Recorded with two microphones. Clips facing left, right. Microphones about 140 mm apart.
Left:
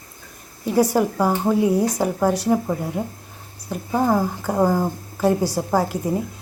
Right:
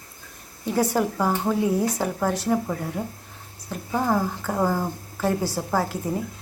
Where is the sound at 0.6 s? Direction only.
10° left (ahead or behind).